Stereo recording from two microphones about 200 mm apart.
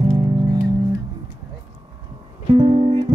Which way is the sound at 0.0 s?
20° right (ahead or behind).